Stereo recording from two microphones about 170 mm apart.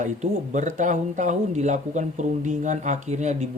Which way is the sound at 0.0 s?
45° right (ahead or behind).